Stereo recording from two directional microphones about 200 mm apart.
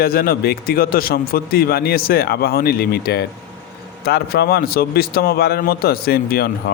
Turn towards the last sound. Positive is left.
turn(degrees=50)  # may be behind; listen again after turning